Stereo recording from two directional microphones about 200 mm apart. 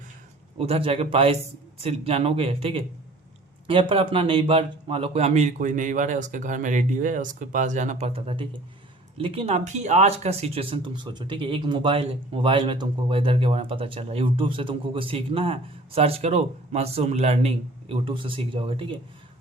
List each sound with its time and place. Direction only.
0.6 s a man's voice: 30° right (ahead or behind)